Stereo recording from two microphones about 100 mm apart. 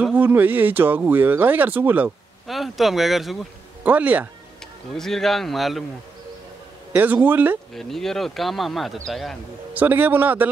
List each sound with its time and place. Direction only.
0.1 s speech: 15° right (ahead or behind)
2.4 s speech: centre (ahead or behind)
3.8 s speech: 15° right (ahead or behind)
4.9 s speech: 5° left (ahead or behind)
6.9 s a man's voice: 15° right (ahead or behind)
7.7 s speech: 5° left (ahead or behind)
9.8 s speech: 20° right (ahead or behind)